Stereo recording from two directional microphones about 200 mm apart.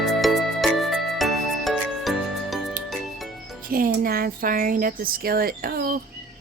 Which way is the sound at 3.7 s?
45° right (ahead or behind).